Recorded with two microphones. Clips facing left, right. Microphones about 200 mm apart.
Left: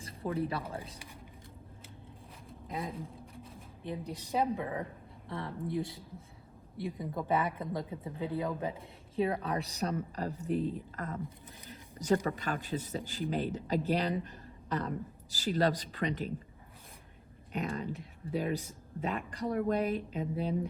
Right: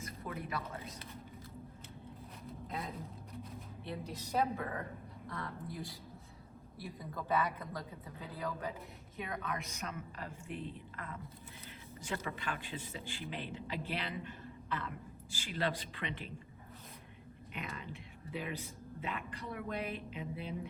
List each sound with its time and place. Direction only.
0.0 s speech: 30° left (ahead or behind)
2.8 s speech: 30° left (ahead or behind)
3.8 s a woman's voice: 15° left (ahead or behind)
5.3 s speech: 25° left (ahead or behind)
7.0 s speech: 25° left (ahead or behind); by 16.3 s 40° left (ahead or behind)
17.5 s speech: 40° left (ahead or behind)